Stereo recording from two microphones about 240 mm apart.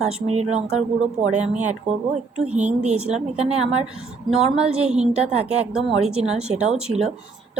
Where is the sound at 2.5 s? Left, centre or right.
Right.